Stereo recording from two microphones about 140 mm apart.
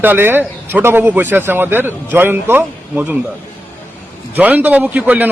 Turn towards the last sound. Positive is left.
turn(degrees=-10)  # may be behind; listen again after turning